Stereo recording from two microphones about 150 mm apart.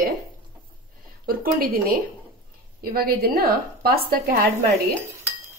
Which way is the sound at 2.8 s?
80° right.